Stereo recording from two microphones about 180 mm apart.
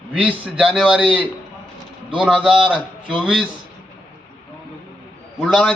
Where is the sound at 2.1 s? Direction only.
5° right (ahead or behind).